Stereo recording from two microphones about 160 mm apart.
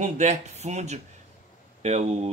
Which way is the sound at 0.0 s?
45° right (ahead or behind).